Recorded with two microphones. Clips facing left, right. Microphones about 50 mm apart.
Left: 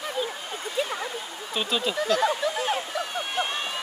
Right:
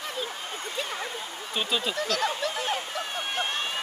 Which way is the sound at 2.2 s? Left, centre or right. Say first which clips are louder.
Left 4 dB; left.